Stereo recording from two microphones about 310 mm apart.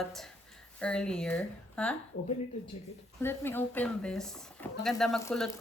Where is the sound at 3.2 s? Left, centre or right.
Centre.